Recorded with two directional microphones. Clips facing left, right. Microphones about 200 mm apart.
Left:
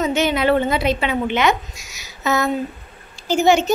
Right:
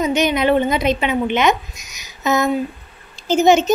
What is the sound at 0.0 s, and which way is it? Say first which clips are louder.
A woman's voice: right 1 dB; 15° right (ahead or behind).